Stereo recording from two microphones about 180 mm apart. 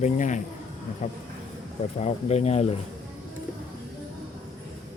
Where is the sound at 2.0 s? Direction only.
35° left (ahead or behind).